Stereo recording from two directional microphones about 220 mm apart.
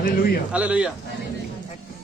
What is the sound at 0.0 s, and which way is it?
Speech, 40° left (ahead or behind).